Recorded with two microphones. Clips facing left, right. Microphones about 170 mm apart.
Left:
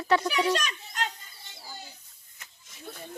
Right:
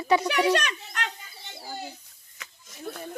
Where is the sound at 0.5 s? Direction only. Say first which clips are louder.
Right 3 dB; 65° right (ahead or behind).